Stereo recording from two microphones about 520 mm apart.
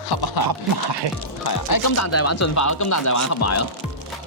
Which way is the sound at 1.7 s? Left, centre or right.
Left.